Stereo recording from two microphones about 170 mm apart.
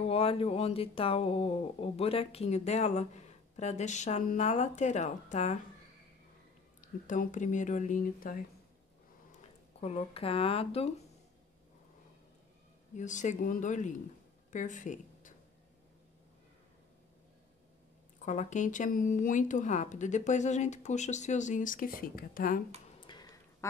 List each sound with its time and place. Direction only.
0.0 s speech: 35° left (ahead or behind)
6.8 s speech: 50° left (ahead or behind)
9.8 s speech: 35° left (ahead or behind)
12.9 s speech: 45° left (ahead or behind)
18.2 s speech: 45° left (ahead or behind)
22.9 s a sound: 25° left (ahead or behind)